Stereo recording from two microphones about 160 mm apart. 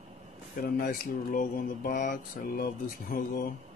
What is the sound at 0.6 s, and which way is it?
Speech, 70° left (ahead or behind).